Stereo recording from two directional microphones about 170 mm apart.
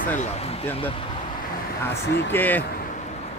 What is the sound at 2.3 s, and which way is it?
Speech, 10° left (ahead or behind).